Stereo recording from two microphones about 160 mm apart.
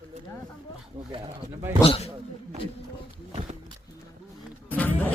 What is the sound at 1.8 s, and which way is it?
Speech, 35° left (ahead or behind).